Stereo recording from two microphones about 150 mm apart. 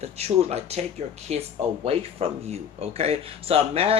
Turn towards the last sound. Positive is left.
turn(degrees=-40)  # may be behind; listen again after turning